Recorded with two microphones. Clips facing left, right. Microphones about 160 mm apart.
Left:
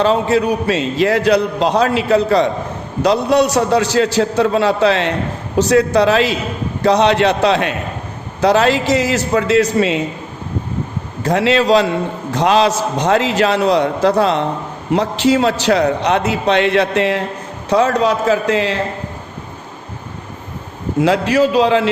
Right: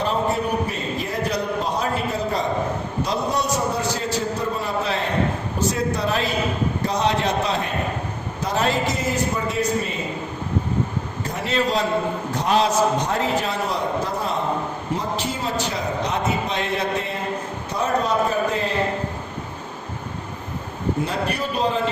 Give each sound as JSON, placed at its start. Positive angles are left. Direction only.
{"t": 0.0, "sound": "a man's voice", "side_deg": 90}
{"t": 6.8, "sound": "a man's voice", "side_deg": 75}
{"t": 11.2, "sound": "a man's voice", "side_deg": 85}
{"t": 21.0, "sound": "a man's voice", "side_deg": 90}